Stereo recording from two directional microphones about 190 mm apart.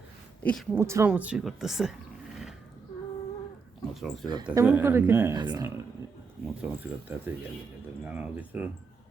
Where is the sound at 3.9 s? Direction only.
Centre (ahead or behind).